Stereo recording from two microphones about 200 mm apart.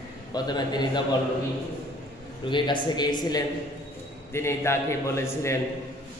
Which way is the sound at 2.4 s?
25° left (ahead or behind).